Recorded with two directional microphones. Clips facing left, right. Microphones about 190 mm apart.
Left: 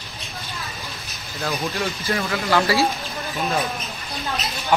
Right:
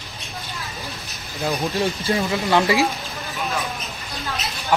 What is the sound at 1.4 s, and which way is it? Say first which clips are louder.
Speech: right 2 dB; 15° right (ahead or behind).